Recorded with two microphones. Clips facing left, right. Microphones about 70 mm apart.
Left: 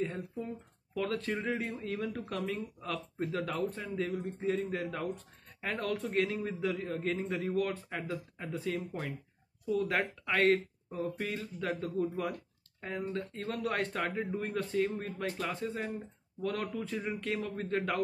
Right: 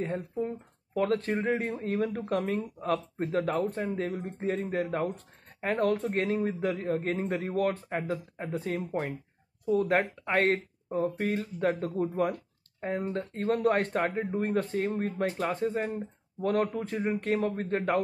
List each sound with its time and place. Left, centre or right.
0.0 s a man's voice: right